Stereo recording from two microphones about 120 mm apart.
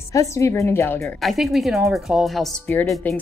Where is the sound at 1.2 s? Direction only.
Centre (ahead or behind).